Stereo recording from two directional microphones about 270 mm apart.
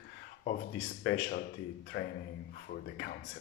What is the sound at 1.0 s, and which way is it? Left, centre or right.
Speech, left.